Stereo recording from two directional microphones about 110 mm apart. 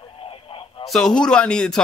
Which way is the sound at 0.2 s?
60° left (ahead or behind).